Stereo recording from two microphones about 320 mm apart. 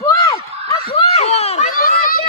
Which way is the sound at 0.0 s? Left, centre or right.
Centre.